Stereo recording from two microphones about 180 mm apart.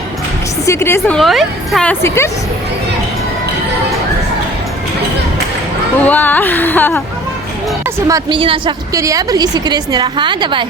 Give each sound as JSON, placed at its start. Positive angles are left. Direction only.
{"t": 0.6, "sound": "a woman's voice", "side_deg": 15}
{"t": 6.1, "sound": "a woman's voice", "side_deg": 10}
{"t": 7.9, "sound": "a woman's voice", "side_deg": -15}
{"t": 8.4, "sound": "a woman's voice", "side_deg": -30}